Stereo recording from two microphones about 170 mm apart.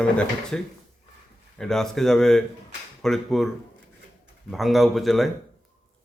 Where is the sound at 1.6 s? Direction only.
Centre (ahead or behind).